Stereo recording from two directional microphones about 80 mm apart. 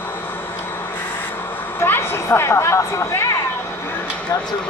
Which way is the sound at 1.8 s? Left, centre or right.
Left.